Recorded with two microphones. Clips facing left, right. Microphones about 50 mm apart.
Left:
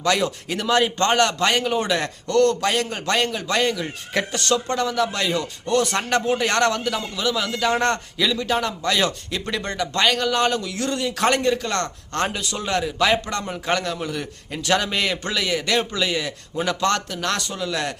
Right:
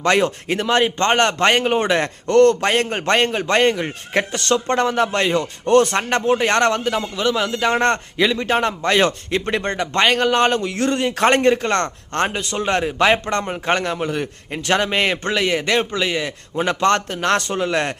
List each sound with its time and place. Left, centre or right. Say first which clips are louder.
0.0 s a man's voice: right 4 dB; right
5.7 s speech: right 7 dB; right
6.0 s a man's voice: right 3 dB; right